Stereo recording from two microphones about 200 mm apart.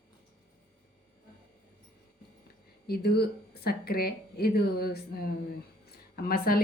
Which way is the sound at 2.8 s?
50° left (ahead or behind).